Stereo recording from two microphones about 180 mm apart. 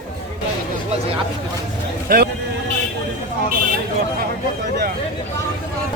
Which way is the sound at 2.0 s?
55° right (ahead or behind).